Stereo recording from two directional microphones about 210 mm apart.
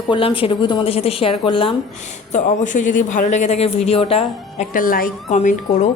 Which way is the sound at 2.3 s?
35° left (ahead or behind).